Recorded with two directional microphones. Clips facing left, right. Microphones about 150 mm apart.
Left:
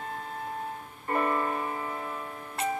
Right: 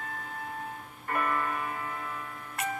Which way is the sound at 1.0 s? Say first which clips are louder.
Left 3 dB; 25° left (ahead or behind).